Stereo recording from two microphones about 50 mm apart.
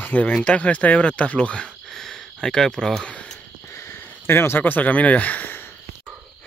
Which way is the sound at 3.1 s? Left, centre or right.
Left.